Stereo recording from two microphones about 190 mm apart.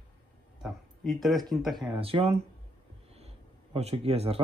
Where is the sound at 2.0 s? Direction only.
30° right (ahead or behind).